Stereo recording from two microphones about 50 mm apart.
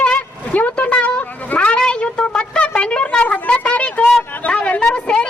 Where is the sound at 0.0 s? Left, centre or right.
Left.